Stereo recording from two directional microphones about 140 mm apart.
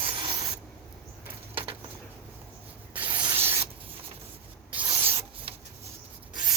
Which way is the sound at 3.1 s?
30° right (ahead or behind).